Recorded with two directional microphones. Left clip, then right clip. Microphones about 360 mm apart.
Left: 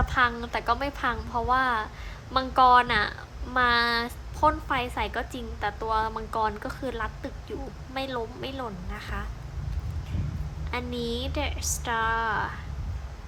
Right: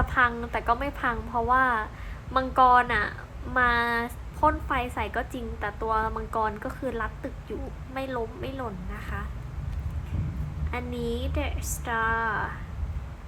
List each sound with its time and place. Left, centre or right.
0.0 s a woman's voice: centre
10.7 s a woman's voice: centre